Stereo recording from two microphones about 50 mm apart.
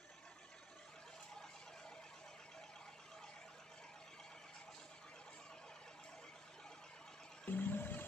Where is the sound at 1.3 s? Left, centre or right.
Centre.